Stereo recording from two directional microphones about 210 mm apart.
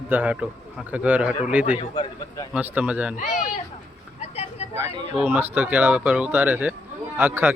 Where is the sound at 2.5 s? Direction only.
5° right (ahead or behind).